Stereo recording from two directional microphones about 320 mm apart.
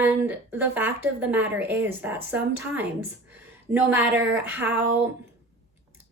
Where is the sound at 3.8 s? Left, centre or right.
Centre.